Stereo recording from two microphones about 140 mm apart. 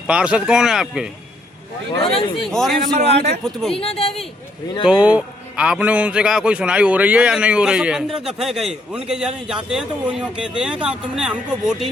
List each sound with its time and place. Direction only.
0.1 s a man's voice: 5° right (ahead or behind)
1.9 s speech: 40° left (ahead or behind)
2.3 s a man's voice: centre (ahead or behind)
3.0 s a man's voice: 50° right (ahead or behind)
3.4 s a man's voice: centre (ahead or behind)
3.8 s speech: 45° left (ahead or behind)
4.9 s a man's voice: 10° right (ahead or behind)